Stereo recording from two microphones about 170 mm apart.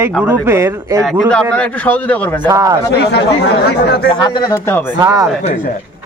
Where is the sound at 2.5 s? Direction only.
20° right (ahead or behind).